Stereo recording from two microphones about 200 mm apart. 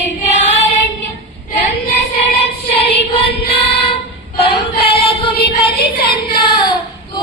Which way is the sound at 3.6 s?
30° left (ahead or behind).